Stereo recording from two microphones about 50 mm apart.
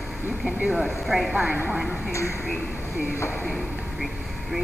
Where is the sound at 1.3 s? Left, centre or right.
Right.